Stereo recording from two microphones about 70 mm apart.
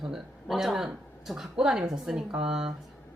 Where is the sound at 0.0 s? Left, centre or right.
Centre.